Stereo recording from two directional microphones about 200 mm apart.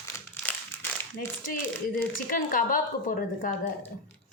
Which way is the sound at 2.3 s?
40° left (ahead or behind).